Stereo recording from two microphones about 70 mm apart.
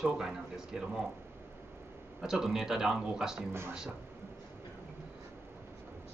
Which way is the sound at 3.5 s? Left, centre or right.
Right.